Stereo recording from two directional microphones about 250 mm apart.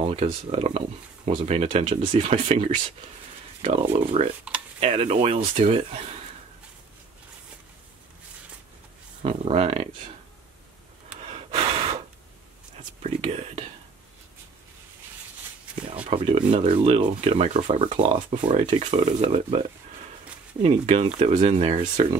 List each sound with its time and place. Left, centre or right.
0.1 s speech: right
9.2 s speech: right
11.2 s gasp: right
13.0 s speech: right
16.1 s speech: right
20.6 s speech: right